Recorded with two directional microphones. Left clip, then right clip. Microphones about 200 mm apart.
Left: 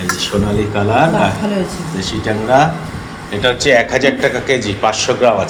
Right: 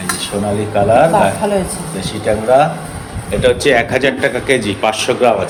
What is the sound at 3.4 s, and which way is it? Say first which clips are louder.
A man's voice: even; 25° right (ahead or behind).